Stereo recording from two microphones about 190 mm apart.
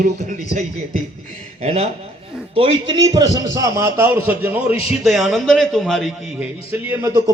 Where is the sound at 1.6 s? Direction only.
35° right (ahead or behind); by 6.4 s centre (ahead or behind).